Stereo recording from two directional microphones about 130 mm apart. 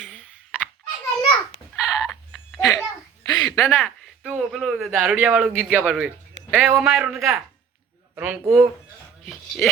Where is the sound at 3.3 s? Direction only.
35° left (ahead or behind).